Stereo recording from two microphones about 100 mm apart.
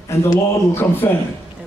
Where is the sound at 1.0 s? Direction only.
25° left (ahead or behind).